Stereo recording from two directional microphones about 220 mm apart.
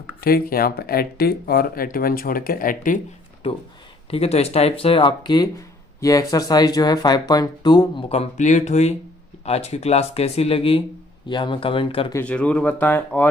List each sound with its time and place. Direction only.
0.2 s speech: 45° left (ahead or behind)
4.1 s speech: 25° left (ahead or behind)
12.1 s speech: 5° left (ahead or behind)